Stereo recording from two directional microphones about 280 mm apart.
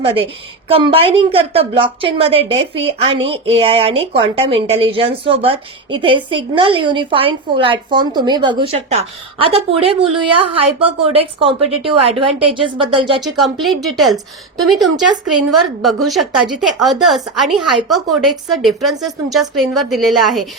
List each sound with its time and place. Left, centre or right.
0.0 s a woman's voice: centre
13.2 s a woman's voice: centre
15.3 s a woman's voice: right
15.5 s a woman's voice: centre